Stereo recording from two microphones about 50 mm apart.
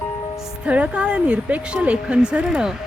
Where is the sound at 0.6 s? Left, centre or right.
Right.